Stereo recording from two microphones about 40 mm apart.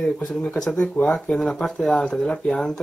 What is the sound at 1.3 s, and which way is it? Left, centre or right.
Speech, centre.